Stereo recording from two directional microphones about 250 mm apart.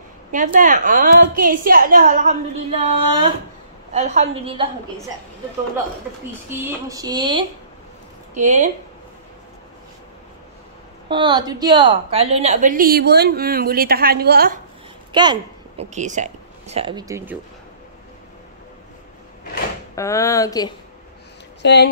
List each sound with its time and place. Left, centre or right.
0.3 s a woman's voice: right
6.9 s speech: centre
8.4 s a woman's voice: right
11.1 s a woman's voice: centre; by 14.6 s right
15.1 s speech: centre
15.8 s speech: right; by 17.4 s centre
20.0 s speech: centre
21.6 s a sound: left